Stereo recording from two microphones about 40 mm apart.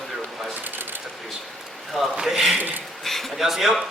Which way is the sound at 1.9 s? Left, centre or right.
Centre.